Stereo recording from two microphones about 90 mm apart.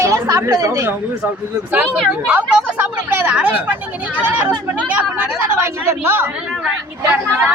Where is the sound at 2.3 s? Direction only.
20° right (ahead or behind).